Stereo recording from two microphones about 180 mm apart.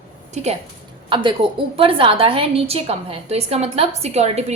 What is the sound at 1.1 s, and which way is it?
A woman's voice, 25° right (ahead or behind).